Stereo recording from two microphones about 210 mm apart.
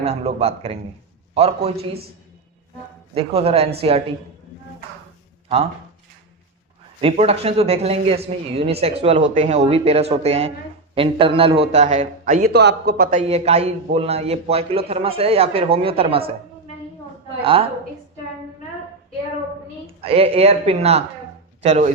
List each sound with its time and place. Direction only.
0.0 s a woman's voice: 30° right (ahead or behind)
3.2 s a woman's voice: 30° right (ahead or behind)
7.0 s a woman's voice: 30° right (ahead or behind)
12.5 s a man's voice: 50° right (ahead or behind)
13.1 s a woman's voice: 30° right (ahead or behind)
17.4 s a woman's voice: 25° right (ahead or behind)
20.0 s a woman's voice: 25° right (ahead or behind)